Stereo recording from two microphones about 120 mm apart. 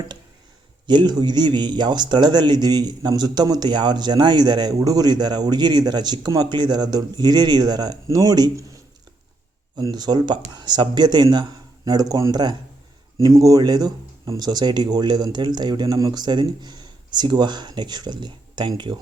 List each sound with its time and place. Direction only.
0.9 s speech: 40° right (ahead or behind)